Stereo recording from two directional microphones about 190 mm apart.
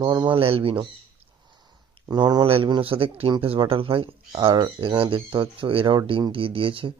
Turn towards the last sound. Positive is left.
turn(degrees=-30)  # may be behind; listen again after turning